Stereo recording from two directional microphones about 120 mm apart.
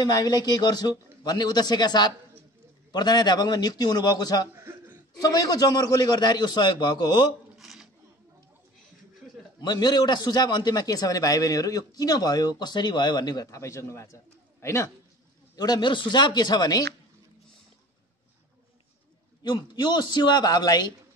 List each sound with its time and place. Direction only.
0.0 s a man's voice: 35° left (ahead or behind)
7.5 s a sound: centre (ahead or behind)
9.6 s a man's voice: 35° left (ahead or behind)
19.4 s a man's voice: 35° left (ahead or behind)